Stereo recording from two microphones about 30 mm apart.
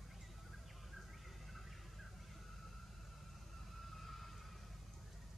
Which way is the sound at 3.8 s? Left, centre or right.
Centre.